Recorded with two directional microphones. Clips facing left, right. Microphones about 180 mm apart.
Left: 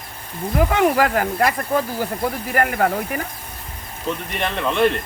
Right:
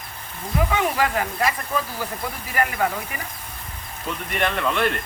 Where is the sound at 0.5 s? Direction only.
55° left (ahead or behind).